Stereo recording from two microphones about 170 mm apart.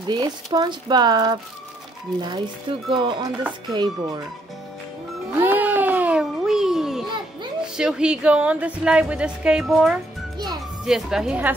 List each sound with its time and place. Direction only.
0.1 s speech: 25° right (ahead or behind)
5.4 s a sound: 10° right (ahead or behind)
7.7 s a woman's voice: 5° right (ahead or behind)